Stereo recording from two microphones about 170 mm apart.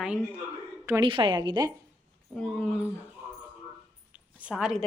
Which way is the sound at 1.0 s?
30° right (ahead or behind).